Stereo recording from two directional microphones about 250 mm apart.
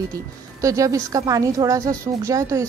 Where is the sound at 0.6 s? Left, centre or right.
Centre.